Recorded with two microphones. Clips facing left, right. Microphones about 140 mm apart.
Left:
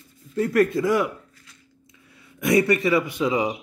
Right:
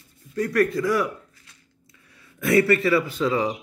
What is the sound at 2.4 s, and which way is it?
Speech, 20° left (ahead or behind).